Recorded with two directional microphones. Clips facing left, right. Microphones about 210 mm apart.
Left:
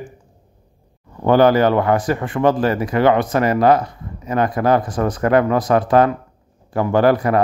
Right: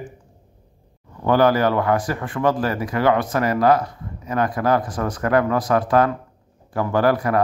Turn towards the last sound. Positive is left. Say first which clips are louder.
# left 3 dB
turn(degrees=25)  # may be behind; listen again after turning